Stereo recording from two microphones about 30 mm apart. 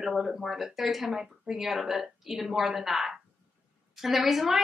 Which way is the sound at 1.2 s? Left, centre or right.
Centre.